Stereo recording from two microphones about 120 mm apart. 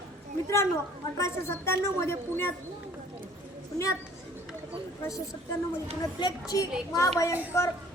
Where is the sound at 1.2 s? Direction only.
20° left (ahead or behind).